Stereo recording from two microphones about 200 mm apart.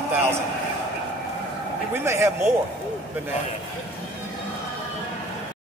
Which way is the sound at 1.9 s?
15° right (ahead or behind).